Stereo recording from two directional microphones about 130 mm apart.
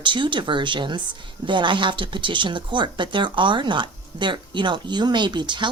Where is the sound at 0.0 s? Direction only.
40° right (ahead or behind).